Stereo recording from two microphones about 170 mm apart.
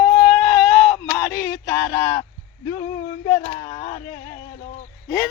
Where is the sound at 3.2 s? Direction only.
30° left (ahead or behind).